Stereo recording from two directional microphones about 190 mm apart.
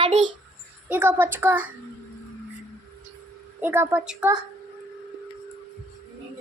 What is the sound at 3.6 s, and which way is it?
Speech, 10° right (ahead or behind).